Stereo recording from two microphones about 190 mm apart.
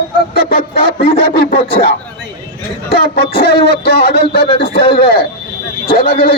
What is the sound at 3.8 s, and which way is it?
Speech, 55° left (ahead or behind).